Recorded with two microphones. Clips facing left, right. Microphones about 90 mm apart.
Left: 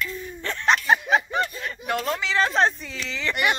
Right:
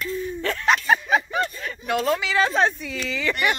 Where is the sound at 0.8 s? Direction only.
20° left (ahead or behind).